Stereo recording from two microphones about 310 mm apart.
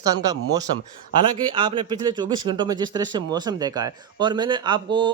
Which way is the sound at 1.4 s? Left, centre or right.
Centre.